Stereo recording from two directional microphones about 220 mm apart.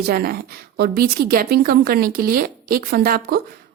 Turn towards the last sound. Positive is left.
turn(degrees=-45)  # may be behind; listen again after turning